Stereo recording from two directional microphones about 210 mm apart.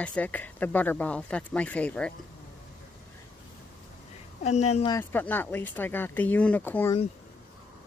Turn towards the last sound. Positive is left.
turn(degrees=10)  # may be behind; listen again after turning